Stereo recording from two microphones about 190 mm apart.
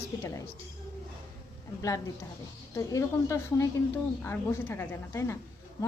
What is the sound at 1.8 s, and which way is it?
A woman's voice, 15° left (ahead or behind).